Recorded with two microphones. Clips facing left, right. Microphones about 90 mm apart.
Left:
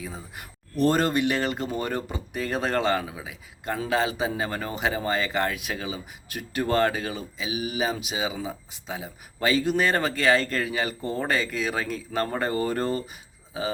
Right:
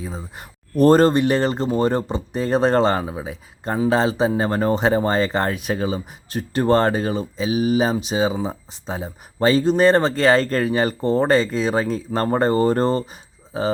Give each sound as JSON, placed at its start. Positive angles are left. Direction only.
{"t": 0.0, "sound": "speech", "side_deg": -25}